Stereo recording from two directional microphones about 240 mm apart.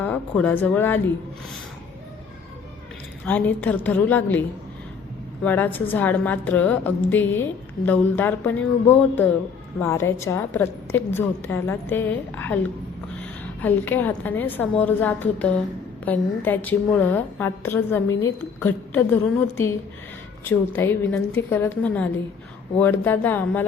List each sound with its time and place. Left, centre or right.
0.0 s a woman's voice: centre
3.2 s a woman's voice: centre